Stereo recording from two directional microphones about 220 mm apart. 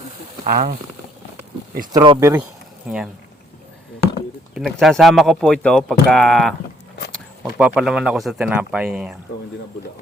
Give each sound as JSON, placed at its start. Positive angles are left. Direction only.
{"t": 0.4, "sound": "speech", "side_deg": -40}
{"t": 1.9, "sound": "speech", "side_deg": -20}
{"t": 2.3, "sound": "a sound", "side_deg": -5}
{"t": 4.5, "sound": "speech", "side_deg": 0}